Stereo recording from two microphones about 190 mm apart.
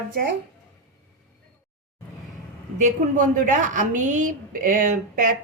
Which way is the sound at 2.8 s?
40° right (ahead or behind).